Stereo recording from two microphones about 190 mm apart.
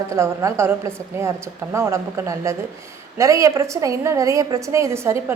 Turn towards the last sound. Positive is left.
turn(degrees=-15)  # may be behind; listen again after turning